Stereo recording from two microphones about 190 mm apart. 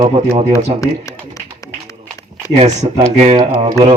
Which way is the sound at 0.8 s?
15° left (ahead or behind).